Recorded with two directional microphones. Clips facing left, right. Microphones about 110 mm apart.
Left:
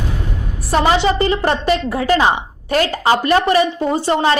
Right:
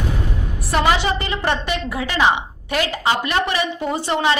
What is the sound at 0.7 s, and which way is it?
A woman's voice, 30° left (ahead or behind).